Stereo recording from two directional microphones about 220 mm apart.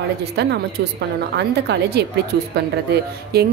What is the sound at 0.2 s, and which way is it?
A woman's voice, 50° right (ahead or behind).